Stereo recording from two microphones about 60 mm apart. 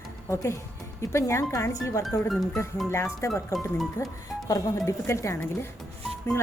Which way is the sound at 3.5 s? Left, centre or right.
Left.